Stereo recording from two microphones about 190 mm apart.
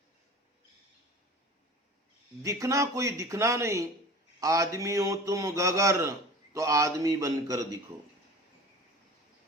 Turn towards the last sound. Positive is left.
turn(degrees=-20)  # may be behind; listen again after turning